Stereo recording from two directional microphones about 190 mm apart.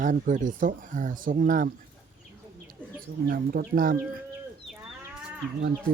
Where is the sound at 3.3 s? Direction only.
50° right (ahead or behind).